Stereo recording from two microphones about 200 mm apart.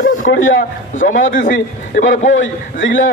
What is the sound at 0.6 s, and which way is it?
Speech, 40° left (ahead or behind).